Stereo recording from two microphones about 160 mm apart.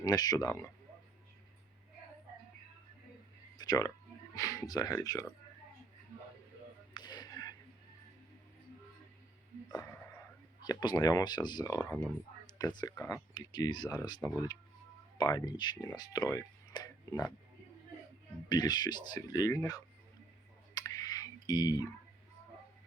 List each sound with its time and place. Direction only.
0.0 s speech: 25° left (ahead or behind)
3.6 s speech: 25° left (ahead or behind)
6.9 s a sound: 25° left (ahead or behind)
9.7 s a sound: 20° left (ahead or behind)
10.6 s speech: 25° left (ahead or behind)
18.4 s speech: 25° left (ahead or behind)
20.7 s clicking: 25° left (ahead or behind)